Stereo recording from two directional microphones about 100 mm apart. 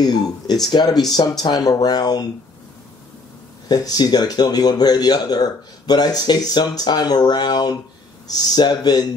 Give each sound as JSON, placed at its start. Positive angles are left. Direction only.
{"t": 0.0, "sound": "speech", "side_deg": 40}
{"t": 3.6, "sound": "speech", "side_deg": 40}